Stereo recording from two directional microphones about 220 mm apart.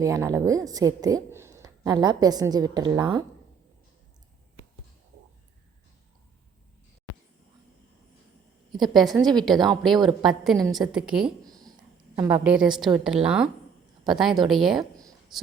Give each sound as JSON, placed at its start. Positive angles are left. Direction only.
{"t": 0.0, "sound": "a woman's voice", "side_deg": -15}
{"t": 8.8, "sound": "a woman's voice", "side_deg": 0}
{"t": 11.4, "sound": "a sound", "side_deg": -15}
{"t": 12.1, "sound": "a woman's voice", "side_deg": -5}